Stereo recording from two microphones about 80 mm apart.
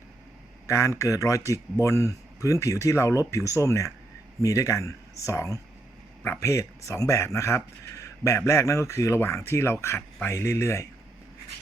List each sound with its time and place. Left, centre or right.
0.7 s speech: left